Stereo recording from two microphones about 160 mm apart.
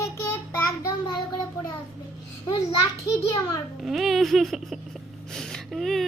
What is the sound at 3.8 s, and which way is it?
A woman's voice, centre (ahead or behind).